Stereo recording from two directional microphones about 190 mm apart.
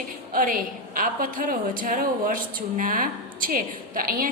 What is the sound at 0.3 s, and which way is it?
A woman's voice, 45° right (ahead or behind).